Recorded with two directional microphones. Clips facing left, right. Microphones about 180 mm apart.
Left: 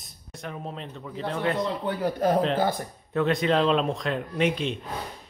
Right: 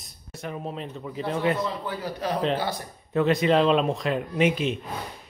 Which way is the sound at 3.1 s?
Centre (ahead or behind).